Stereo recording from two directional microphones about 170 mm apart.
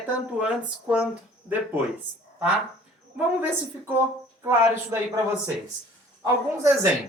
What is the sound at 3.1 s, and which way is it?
Speech, 10° right (ahead or behind).